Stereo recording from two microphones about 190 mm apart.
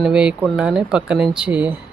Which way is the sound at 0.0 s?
5° right (ahead or behind).